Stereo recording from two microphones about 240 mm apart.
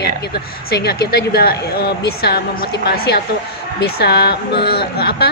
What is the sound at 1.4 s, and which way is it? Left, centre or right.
A woman's voice, left.